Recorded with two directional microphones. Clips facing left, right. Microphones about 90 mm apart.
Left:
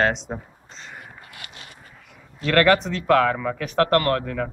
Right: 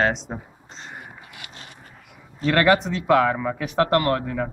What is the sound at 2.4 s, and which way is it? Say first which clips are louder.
A man's voice: even; 15° right (ahead or behind).